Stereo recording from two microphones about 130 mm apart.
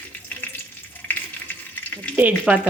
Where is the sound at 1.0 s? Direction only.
10° left (ahead or behind).